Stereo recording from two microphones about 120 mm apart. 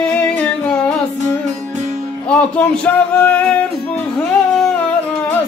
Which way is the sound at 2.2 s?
10° left (ahead or behind).